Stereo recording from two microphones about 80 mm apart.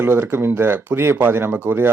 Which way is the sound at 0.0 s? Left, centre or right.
Right.